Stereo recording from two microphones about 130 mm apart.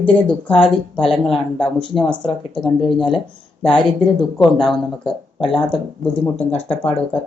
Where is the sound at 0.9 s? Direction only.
5° left (ahead or behind).